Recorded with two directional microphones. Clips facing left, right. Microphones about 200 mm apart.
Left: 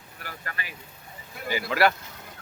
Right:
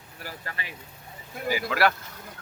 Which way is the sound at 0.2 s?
30° right (ahead or behind).